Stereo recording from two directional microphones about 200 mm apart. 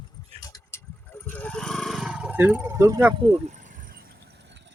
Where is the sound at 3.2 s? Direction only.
35° right (ahead or behind).